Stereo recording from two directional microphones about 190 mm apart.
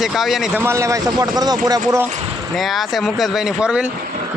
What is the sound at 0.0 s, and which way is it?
Speech, centre (ahead or behind).